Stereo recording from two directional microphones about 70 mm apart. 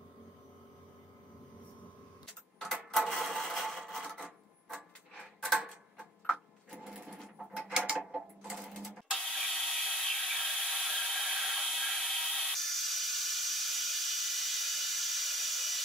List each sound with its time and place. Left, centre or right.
2.6 s cash register: centre
6.3 s sewing machine: centre